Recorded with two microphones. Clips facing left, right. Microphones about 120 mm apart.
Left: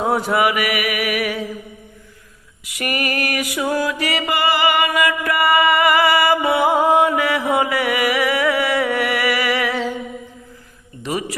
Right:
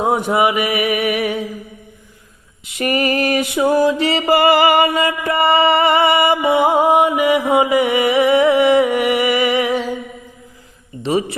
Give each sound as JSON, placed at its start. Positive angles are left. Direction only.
{"t": 0.0, "sound": "mantra", "side_deg": -20}
{"t": 2.6, "sound": "mantra", "side_deg": -25}
{"t": 4.4, "sound": "music", "side_deg": -40}
{"t": 4.9, "sound": "music", "side_deg": -25}
{"t": 11.0, "sound": "a sound", "side_deg": -25}